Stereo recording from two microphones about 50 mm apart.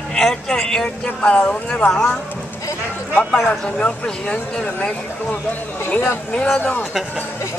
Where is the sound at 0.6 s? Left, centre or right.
Centre.